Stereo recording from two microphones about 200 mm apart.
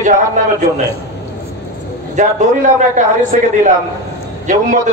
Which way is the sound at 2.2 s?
40° right (ahead or behind).